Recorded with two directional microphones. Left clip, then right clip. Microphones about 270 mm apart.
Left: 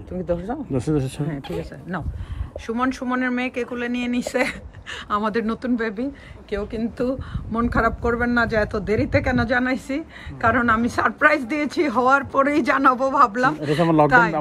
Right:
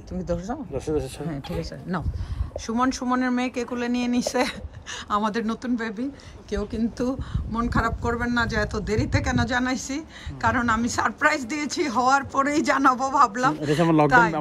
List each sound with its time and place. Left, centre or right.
0.3 s speech: centre
0.7 s speech: left
2.6 s a woman's voice: centre